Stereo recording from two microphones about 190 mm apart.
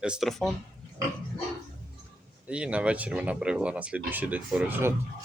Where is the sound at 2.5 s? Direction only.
5° right (ahead or behind).